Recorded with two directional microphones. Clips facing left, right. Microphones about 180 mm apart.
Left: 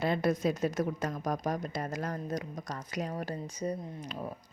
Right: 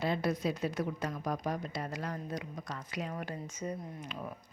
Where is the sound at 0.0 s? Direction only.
50° left (ahead or behind).